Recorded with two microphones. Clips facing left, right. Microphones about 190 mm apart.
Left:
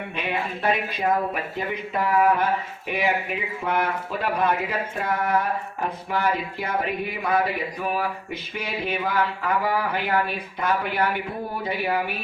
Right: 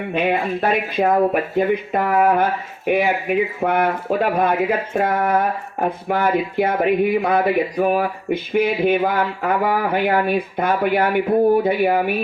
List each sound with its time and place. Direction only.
0.1 s speech: 55° right (ahead or behind)